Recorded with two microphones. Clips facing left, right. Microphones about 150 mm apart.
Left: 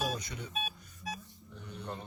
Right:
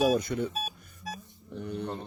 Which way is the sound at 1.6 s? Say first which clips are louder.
Right 12 dB; 60° right (ahead or behind).